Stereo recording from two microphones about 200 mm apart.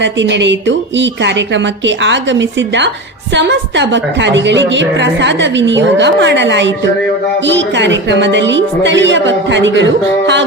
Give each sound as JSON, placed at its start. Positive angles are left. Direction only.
{"t": 0.0, "sound": "a woman's voice", "side_deg": -60}